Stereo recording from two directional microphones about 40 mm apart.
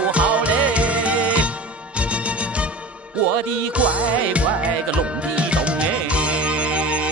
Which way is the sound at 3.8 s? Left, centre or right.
Right.